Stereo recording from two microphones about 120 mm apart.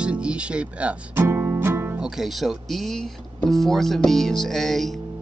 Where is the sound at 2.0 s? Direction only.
5° right (ahead or behind).